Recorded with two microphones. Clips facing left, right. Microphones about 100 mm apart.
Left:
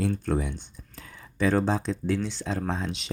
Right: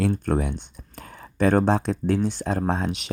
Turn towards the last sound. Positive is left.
turn(degrees=-55)  # may be behind; listen again after turning